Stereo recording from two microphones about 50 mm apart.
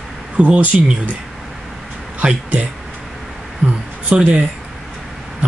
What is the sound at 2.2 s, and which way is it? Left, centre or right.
Speech, right.